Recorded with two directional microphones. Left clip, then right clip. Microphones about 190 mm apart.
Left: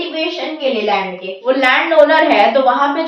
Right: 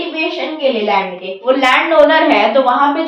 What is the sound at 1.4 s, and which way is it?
A woman's voice, centre (ahead or behind).